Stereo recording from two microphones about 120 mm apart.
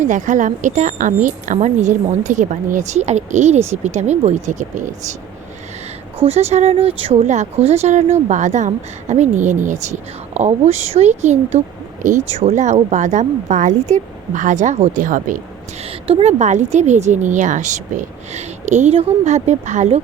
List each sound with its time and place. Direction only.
0.0 s a woman's voice: 90° right; by 4.4 s 70° right (ahead or behind)
4.4 s a woman's voice: 90° right
6.2 s speech: 60° right (ahead or behind)
7.3 s a woman's voice: 70° right (ahead or behind); by 15.4 s 90° right
16.0 s a woman's voice: 50° right (ahead or behind)
16.4 s a woman's voice: 80° right